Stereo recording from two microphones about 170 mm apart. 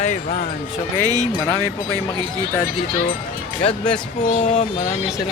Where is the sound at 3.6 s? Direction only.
35° left (ahead or behind).